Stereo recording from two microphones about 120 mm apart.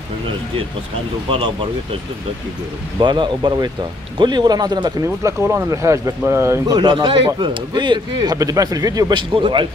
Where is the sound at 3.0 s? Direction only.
40° right (ahead or behind); by 6.8 s 20° right (ahead or behind).